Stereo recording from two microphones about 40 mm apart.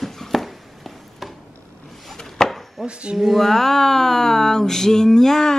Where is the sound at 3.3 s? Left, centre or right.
Centre.